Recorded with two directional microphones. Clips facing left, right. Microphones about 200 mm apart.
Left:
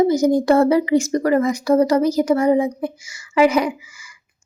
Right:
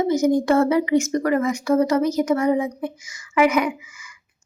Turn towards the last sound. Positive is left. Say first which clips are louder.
# left 1 dB
turn(degrees=30)  # may be behind; listen again after turning